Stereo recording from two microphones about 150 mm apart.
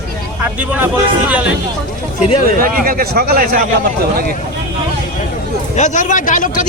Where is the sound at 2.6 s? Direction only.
70° right (ahead or behind).